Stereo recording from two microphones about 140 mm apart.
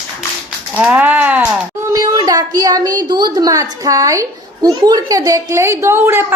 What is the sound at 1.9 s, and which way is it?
A child's voice, 25° right (ahead or behind).